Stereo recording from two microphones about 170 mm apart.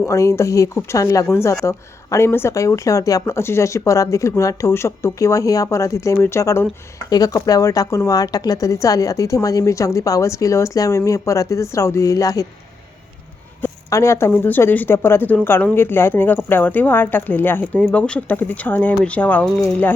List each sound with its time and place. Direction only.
0.1 s a woman's voice: 15° left (ahead or behind)
13.6 s speech: 15° left (ahead or behind)